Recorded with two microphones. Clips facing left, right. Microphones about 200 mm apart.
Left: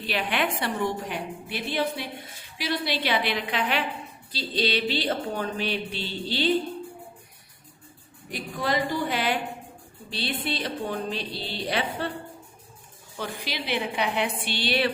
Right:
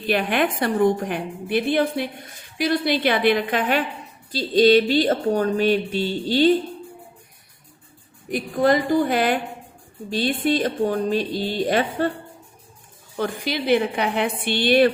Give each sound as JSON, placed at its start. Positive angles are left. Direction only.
{"t": 0.1, "sound": "speech", "side_deg": -50}
{"t": 8.3, "sound": "speech", "side_deg": -50}
{"t": 13.1, "sound": "speech", "side_deg": -50}